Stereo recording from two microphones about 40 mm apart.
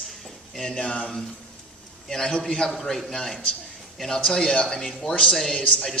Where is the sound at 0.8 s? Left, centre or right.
Left.